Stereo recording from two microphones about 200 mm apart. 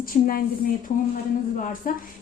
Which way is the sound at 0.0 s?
45° left (ahead or behind).